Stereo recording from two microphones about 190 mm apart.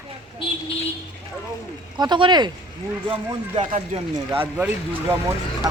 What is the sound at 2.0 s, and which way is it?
Speech, 25° right (ahead or behind).